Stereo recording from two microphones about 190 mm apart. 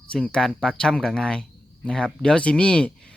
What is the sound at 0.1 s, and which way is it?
Speech, 5° left (ahead or behind).